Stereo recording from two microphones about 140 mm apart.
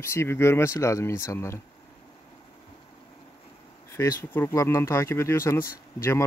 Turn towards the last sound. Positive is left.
turn(degrees=20)  # may be behind; listen again after turning